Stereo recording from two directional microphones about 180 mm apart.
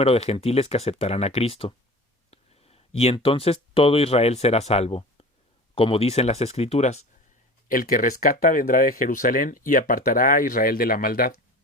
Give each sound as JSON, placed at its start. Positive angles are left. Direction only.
{"t": 0.0, "sound": "speech", "side_deg": 35}
{"t": 7.7, "sound": "speech", "side_deg": 50}